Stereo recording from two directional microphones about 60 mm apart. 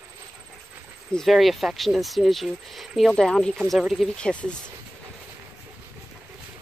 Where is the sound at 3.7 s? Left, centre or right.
Centre.